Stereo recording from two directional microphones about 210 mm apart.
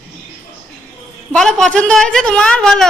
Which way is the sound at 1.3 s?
5° left (ahead or behind).